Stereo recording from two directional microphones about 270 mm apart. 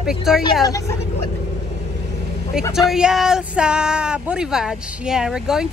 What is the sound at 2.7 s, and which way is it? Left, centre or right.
Speech, centre.